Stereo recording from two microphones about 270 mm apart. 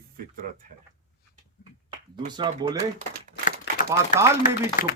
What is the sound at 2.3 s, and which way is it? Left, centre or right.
Speech, centre.